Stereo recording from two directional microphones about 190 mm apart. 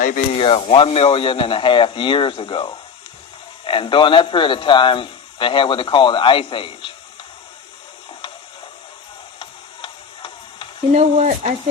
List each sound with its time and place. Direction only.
0.3 s speech: 30° left (ahead or behind)
9.4 s a sound: 25° left (ahead or behind)
10.9 s speech: 35° right (ahead or behind)